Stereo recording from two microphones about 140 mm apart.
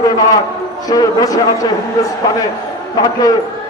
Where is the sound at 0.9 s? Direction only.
25° left (ahead or behind).